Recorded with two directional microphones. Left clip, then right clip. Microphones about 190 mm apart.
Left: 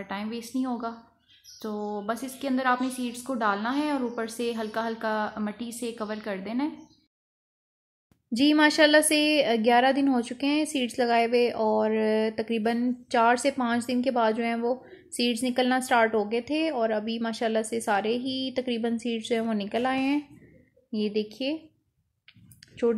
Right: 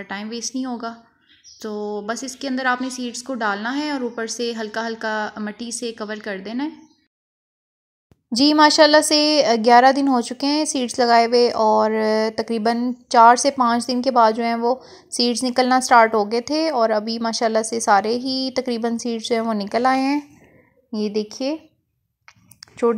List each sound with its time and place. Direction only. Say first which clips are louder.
0.0 s a woman's voice: right 6 dB; 20° right (ahead or behind)
8.4 s speech: right 7 dB; 5° right (ahead or behind)
20.9 s a woman's voice: right 5 dB; 20° right (ahead or behind)